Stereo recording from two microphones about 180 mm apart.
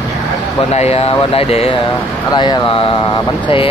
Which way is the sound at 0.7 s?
35° left (ahead or behind).